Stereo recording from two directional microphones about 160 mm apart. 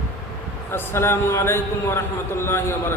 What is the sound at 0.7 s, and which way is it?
Speech, 15° left (ahead or behind).